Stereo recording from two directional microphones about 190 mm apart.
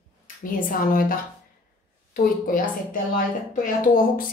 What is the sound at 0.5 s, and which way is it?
Speech, 45° left (ahead or behind).